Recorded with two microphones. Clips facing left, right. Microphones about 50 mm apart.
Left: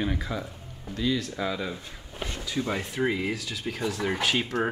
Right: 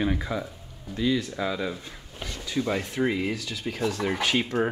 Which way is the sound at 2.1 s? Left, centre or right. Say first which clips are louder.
Left 3 dB; left.